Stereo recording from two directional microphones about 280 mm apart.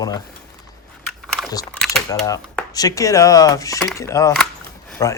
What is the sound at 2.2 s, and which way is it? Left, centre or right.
A man's voice, centre.